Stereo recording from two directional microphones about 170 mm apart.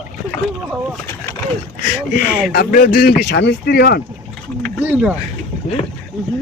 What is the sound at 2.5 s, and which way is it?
Speech, 60° left (ahead or behind).